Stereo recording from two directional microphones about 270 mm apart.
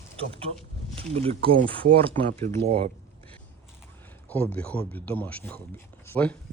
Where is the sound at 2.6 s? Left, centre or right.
Right.